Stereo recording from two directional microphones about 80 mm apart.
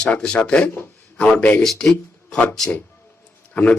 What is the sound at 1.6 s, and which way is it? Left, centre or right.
Speech, centre.